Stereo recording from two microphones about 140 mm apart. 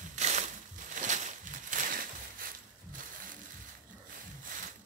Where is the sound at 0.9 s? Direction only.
60° right (ahead or behind); by 3.3 s 80° right.